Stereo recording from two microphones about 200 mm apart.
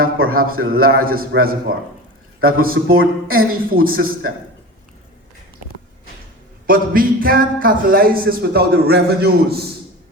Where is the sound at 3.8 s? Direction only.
45° right (ahead or behind).